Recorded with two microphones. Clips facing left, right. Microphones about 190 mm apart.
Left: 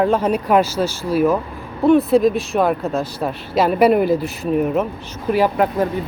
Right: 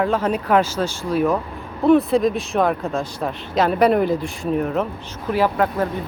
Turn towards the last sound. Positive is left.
turn(degrees=15)  # may be behind; listen again after turning